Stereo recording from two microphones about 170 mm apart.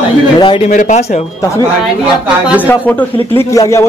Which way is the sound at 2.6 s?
10° left (ahead or behind).